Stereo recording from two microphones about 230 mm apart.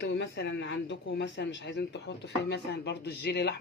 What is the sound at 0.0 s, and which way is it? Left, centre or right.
Speech, left.